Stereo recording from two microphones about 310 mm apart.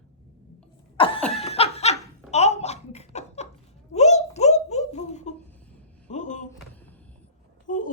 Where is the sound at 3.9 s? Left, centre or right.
Left.